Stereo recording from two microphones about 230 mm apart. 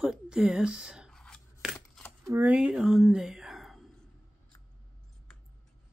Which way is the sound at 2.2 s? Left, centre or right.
Centre.